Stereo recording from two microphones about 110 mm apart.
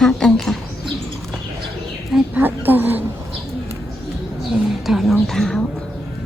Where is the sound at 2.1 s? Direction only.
15° right (ahead or behind).